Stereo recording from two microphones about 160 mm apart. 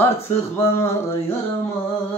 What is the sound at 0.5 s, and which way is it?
Speech, 15° left (ahead or behind).